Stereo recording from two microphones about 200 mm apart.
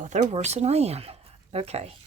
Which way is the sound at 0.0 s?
40° right (ahead or behind).